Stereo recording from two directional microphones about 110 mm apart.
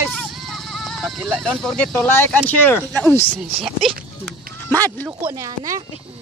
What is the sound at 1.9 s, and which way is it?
Speech, 20° left (ahead or behind).